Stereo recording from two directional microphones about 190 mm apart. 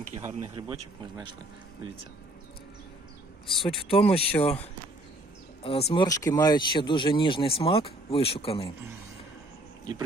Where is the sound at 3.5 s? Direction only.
30° left (ahead or behind).